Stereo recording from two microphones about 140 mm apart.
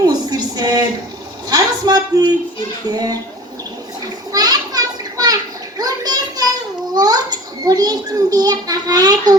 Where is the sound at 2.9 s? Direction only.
25° right (ahead or behind).